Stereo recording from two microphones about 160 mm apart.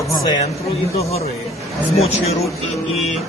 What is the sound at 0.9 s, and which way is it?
A man's voice, 40° left (ahead or behind).